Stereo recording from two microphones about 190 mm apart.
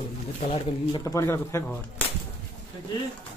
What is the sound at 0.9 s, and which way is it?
Speech, 15° left (ahead or behind).